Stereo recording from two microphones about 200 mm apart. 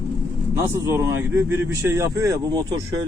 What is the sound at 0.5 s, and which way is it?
A man's voice, 10° right (ahead or behind).